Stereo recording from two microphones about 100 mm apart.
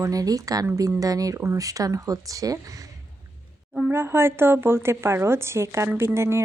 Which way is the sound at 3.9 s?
25° right (ahead or behind).